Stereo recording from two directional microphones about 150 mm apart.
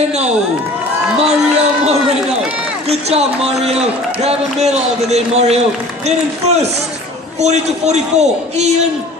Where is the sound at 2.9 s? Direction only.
45° right (ahead or behind).